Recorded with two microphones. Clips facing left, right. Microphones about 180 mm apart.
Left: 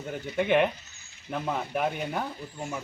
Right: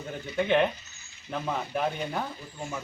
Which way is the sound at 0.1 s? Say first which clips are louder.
Left 1 dB; 5° left (ahead or behind).